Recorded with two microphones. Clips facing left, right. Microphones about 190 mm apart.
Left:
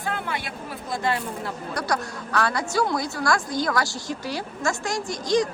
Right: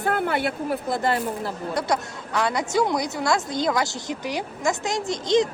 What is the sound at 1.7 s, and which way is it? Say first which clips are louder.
A woman's voice: right 2 dB; 20° right (ahead or behind).